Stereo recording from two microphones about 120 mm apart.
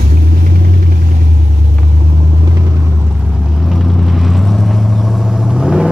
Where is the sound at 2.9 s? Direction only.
10° right (ahead or behind).